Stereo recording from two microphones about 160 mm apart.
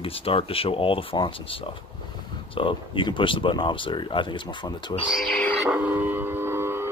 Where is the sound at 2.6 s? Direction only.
30° left (ahead or behind).